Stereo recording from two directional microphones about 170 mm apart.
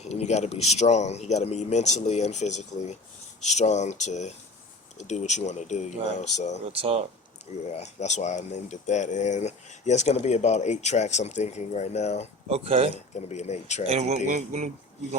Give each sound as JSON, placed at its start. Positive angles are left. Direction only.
{"t": 0.0, "sound": "speech", "side_deg": 40}
{"t": 6.7, "sound": "speech", "side_deg": -35}
{"t": 7.7, "sound": "speech", "side_deg": 40}
{"t": 12.5, "sound": "speech", "side_deg": -35}
{"t": 13.1, "sound": "speech", "side_deg": 40}
{"t": 14.3, "sound": "speech", "side_deg": -45}